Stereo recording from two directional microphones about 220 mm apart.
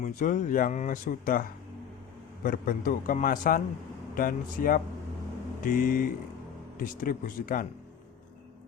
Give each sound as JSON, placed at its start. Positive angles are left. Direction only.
{"t": 0.0, "sound": "speech", "side_deg": 35}